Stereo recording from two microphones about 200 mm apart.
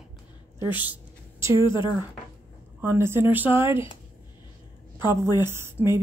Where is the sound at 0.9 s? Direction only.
15° right (ahead or behind).